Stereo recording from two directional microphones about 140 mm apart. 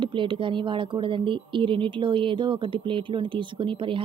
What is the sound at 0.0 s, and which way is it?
Speech, 35° right (ahead or behind).